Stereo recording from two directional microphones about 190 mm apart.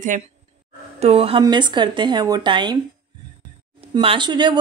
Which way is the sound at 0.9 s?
30° right (ahead or behind).